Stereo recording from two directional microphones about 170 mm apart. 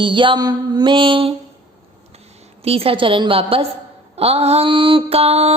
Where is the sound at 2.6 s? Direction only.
35° right (ahead or behind).